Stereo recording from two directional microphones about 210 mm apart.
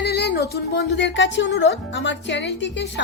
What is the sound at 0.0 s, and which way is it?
Music, 50° left (ahead or behind).